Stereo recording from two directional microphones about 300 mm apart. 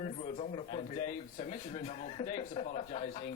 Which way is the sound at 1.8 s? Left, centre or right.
Left.